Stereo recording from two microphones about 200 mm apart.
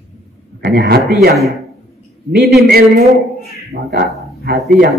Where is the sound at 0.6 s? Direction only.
45° right (ahead or behind).